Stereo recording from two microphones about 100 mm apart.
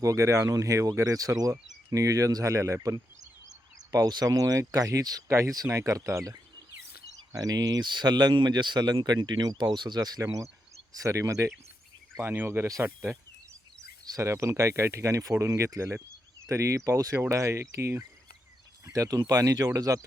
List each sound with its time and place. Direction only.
0.0 s speech: 30° right (ahead or behind)
7.2 s speech: 40° right (ahead or behind)
12.2 s speech: 20° right (ahead or behind)